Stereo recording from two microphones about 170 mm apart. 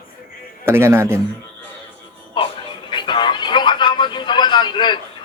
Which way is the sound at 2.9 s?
25° left (ahead or behind).